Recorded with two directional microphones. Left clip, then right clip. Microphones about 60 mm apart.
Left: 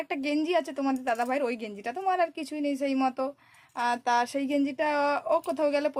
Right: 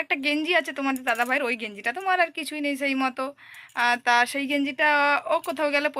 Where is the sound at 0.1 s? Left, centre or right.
Left.